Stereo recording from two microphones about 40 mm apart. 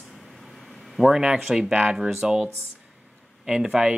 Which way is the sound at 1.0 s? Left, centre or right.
Right.